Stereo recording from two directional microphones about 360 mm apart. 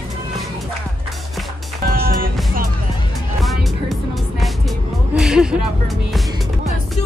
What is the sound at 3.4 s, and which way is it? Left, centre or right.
Music, centre.